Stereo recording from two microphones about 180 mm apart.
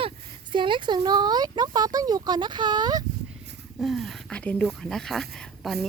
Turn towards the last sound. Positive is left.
turn(degrees=0)  # may be behind; listen again after turning